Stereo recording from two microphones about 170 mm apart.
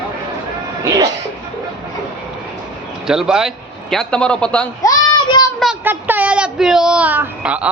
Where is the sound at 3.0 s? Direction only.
5° right (ahead or behind).